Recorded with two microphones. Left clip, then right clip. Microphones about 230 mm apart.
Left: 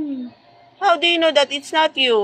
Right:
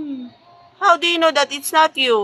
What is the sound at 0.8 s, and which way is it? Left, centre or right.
A woman's voice, centre.